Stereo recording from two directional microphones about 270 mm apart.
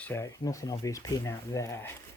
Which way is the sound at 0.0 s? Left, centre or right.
Centre.